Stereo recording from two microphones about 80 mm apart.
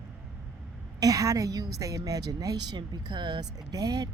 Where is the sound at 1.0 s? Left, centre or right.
Right.